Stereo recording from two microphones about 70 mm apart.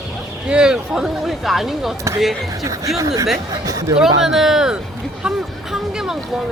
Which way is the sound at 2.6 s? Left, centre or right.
Right.